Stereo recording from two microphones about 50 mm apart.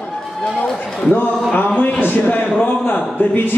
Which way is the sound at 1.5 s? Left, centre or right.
Left.